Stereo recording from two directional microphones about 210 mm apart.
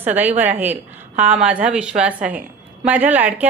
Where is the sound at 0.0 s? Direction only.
10° right (ahead or behind).